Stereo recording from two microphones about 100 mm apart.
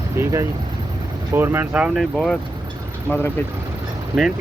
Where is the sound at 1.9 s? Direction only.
Centre (ahead or behind).